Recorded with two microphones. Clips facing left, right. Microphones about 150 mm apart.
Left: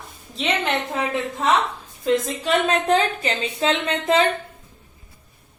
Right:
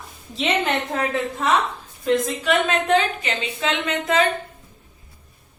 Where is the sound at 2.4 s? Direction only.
35° left (ahead or behind).